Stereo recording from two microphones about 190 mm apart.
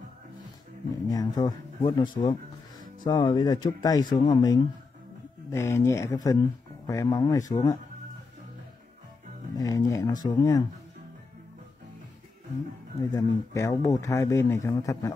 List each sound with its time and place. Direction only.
1.0 s speech: 20° left (ahead or behind)
9.6 s speech: 20° left (ahead or behind)
13.1 s speech: 15° left (ahead or behind)